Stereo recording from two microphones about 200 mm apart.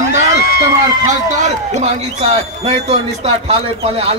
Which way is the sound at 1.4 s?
35° right (ahead or behind).